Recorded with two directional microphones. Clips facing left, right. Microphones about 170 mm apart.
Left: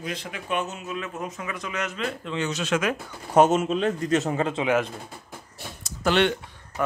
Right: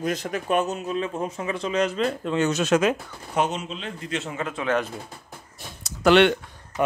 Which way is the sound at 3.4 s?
50° left (ahead or behind).